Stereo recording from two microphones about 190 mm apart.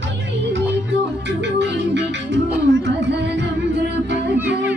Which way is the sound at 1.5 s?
65° right (ahead or behind).